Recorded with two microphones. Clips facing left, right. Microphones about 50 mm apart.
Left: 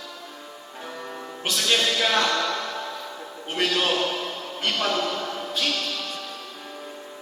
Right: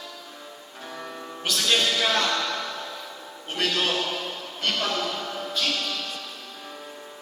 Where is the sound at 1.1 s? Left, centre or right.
Centre.